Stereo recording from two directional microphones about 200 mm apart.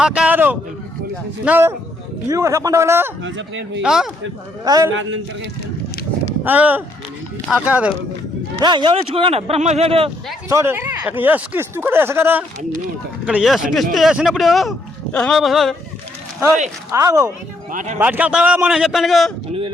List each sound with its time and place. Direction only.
0.0 s speech: 5° right (ahead or behind)
3.2 s a man's voice: 65° right (ahead or behind)
3.8 s speech: centre (ahead or behind)
4.6 s speech: 20° right (ahead or behind)
6.4 s speech: 10° right (ahead or behind)
8.6 s speech: 25° right (ahead or behind)
10.5 s speech: 10° right (ahead or behind)
16.9 s speech: 15° right (ahead or behind)
17.7 s speech: 40° right (ahead or behind)
18.0 s speech: 5° right (ahead or behind)